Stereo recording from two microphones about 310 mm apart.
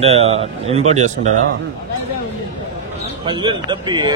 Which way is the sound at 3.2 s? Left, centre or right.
Centre.